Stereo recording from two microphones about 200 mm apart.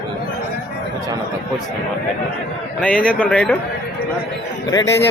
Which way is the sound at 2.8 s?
5° left (ahead or behind).